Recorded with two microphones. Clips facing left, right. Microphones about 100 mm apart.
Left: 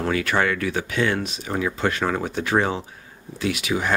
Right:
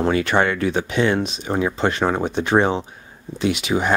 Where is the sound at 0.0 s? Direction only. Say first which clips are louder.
Right 4 dB; 25° right (ahead or behind).